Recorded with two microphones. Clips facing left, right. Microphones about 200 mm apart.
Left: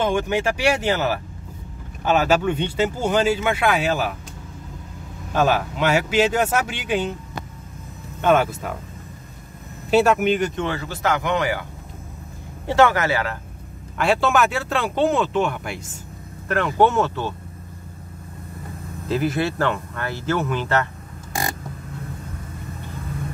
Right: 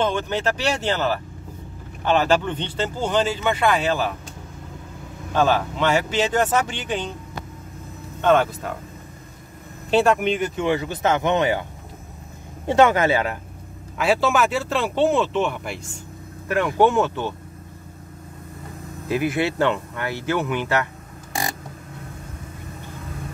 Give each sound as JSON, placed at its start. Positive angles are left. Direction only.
{"t": 0.0, "sound": "speech", "side_deg": 10}
{"t": 5.3, "sound": "speech", "side_deg": 10}
{"t": 8.2, "sound": "speech", "side_deg": 10}
{"t": 9.8, "sound": "speech", "side_deg": 5}
{"t": 10.5, "sound": "speech", "side_deg": -15}
{"t": 12.6, "sound": "speech", "side_deg": -20}
{"t": 13.9, "sound": "speech", "side_deg": 0}
{"t": 19.0, "sound": "speech", "side_deg": -15}